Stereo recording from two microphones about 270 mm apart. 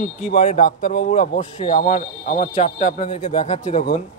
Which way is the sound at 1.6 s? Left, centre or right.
Centre.